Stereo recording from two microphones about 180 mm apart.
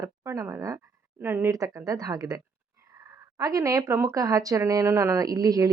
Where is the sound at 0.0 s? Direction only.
15° right (ahead or behind).